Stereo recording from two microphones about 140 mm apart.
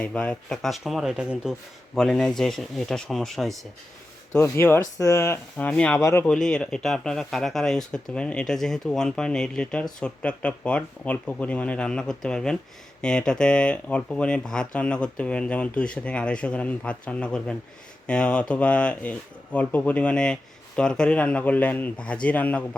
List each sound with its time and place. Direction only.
0.0 s speech: 5° left (ahead or behind)
4.4 s speech: 20° left (ahead or behind)
6.2 s speech: 5° left (ahead or behind)